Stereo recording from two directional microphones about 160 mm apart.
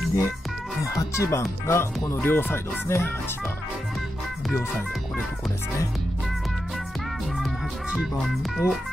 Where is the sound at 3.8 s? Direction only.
Centre (ahead or behind).